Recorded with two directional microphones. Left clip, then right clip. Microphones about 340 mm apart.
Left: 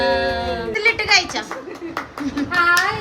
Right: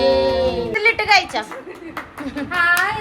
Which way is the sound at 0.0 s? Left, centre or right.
Centre.